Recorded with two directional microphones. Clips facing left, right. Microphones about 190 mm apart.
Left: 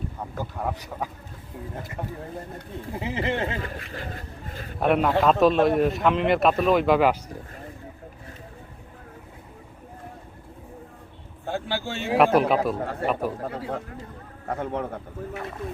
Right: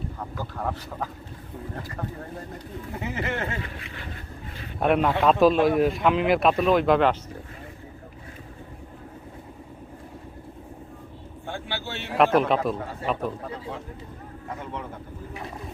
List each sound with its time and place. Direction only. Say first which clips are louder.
0.3 s speech: left 1 dB; 15° left (ahead or behind)
2.9 s speech: left 3 dB; 30° left (ahead or behind)
3.6 s speech: left 3 dB; 40° left (ahead or behind)
4.8 s speech: left 1 dB; centre (ahead or behind)
11.4 s vehicle: left 5 dB; 40° left (ahead or behind)
12.1 s speech: left 1 dB; 5° left (ahead or behind)
12.8 s a man's voice: left 3 dB; 60° left (ahead or behind)